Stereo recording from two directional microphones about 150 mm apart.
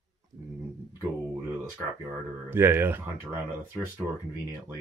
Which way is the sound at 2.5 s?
15° right (ahead or behind).